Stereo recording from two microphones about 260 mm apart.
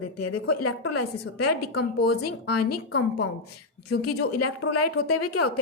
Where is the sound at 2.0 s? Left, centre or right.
Left.